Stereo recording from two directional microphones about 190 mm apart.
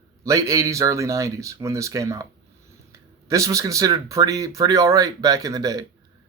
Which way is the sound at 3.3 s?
15° right (ahead or behind).